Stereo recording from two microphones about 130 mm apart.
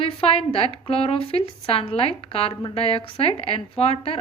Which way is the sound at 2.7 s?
50° left (ahead or behind).